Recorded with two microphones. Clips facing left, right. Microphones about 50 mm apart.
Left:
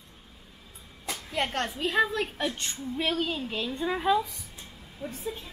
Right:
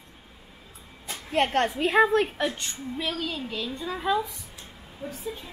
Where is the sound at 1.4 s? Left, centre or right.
Right.